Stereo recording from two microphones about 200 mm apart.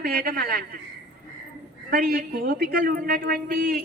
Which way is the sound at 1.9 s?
45° right (ahead or behind).